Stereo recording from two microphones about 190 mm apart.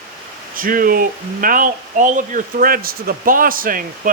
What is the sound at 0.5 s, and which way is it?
Speech, 45° right (ahead or behind).